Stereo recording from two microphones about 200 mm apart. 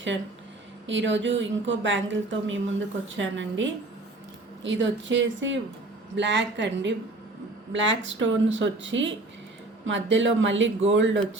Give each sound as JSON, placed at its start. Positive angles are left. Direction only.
{"t": 0.9, "sound": "a woman's voice", "side_deg": -65}